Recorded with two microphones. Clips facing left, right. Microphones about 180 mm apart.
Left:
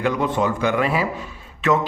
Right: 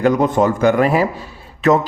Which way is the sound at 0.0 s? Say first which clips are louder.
Right 6 dB; 40° right (ahead or behind).